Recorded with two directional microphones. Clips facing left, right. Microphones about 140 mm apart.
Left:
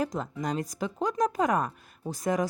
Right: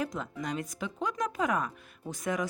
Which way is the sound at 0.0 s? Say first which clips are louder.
Left 4 dB; 40° left (ahead or behind).